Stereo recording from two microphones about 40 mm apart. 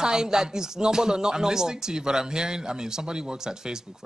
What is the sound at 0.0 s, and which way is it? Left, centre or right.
Speech, centre.